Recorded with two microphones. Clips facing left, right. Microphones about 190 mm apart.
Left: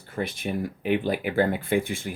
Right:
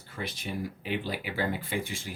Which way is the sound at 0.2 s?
55° left (ahead or behind).